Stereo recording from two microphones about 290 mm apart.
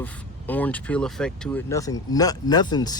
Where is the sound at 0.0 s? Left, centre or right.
Centre.